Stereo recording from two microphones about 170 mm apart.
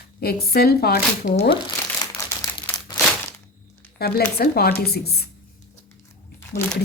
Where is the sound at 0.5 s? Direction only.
65° left (ahead or behind).